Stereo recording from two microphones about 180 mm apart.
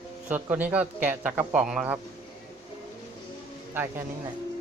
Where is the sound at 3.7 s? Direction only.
10° right (ahead or behind).